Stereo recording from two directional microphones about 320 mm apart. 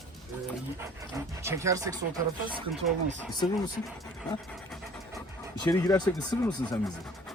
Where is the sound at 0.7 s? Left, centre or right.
Centre.